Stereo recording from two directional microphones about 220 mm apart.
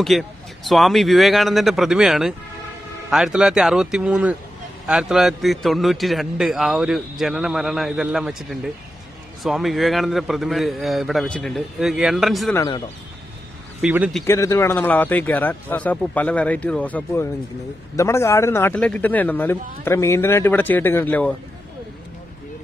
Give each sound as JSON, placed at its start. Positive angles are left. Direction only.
{"t": 0.0, "sound": "a man's voice", "side_deg": 0}
{"t": 12.5, "sound": "a man's voice", "side_deg": 15}
{"t": 13.7, "sound": "a man's voice", "side_deg": -5}
{"t": 14.2, "sound": "a man's voice", "side_deg": 15}